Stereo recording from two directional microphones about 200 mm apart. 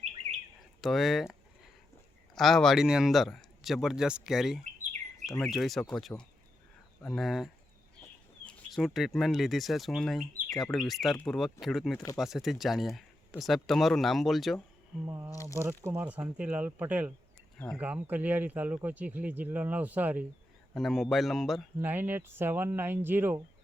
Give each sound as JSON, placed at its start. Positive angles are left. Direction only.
{"t": 0.8, "sound": "a sound", "side_deg": 0}
{"t": 2.3, "sound": "speech", "side_deg": 0}
{"t": 15.0, "sound": "speech", "side_deg": -15}
{"t": 15.3, "sound": "speech", "side_deg": 15}
{"t": 15.5, "sound": "speech", "side_deg": -15}
{"t": 21.8, "sound": "speech", "side_deg": -10}